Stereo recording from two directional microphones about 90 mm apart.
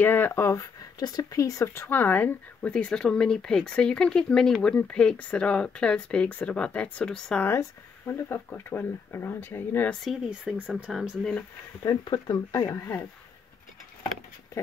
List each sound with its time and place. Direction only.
0.0 s speech: 25° left (ahead or behind)
0.9 s speech: 45° left (ahead or behind); by 7.4 s 10° left (ahead or behind)
8.1 s speech: 25° left (ahead or behind)
10.0 s speech: centre (ahead or behind)
11.9 s speech: 50° left (ahead or behind)